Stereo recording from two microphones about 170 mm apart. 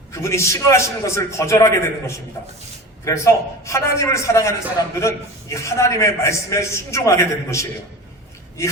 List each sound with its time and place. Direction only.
0.1 s a man's voice: 15° left (ahead or behind)